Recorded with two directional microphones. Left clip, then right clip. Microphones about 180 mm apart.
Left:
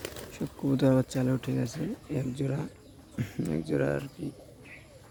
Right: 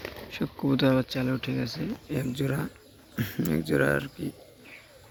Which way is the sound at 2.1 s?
5° left (ahead or behind).